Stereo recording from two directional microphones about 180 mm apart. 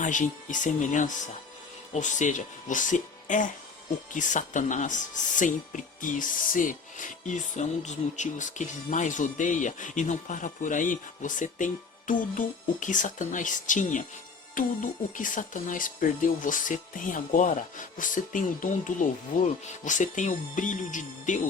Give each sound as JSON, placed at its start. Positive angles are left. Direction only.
{"t": 0.0, "sound": "speech", "side_deg": 45}